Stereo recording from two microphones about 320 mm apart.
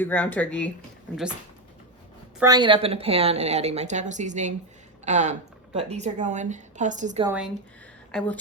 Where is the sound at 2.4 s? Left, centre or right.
Centre.